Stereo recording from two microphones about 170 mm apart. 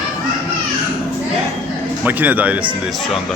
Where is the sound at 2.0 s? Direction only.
10° right (ahead or behind).